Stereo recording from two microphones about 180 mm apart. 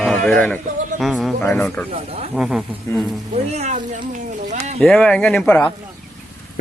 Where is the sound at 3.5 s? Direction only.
40° right (ahead or behind).